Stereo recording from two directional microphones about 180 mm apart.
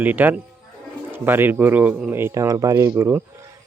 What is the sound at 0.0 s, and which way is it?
Speech, 10° right (ahead or behind).